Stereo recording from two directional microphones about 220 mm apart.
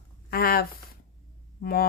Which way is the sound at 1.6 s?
40° left (ahead or behind).